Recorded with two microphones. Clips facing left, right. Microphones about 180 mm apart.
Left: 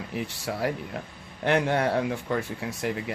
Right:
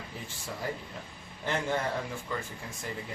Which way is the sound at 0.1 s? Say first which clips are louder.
Left 9 dB; 70° left (ahead or behind).